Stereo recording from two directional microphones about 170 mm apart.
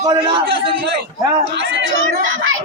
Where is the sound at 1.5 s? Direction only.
90° right.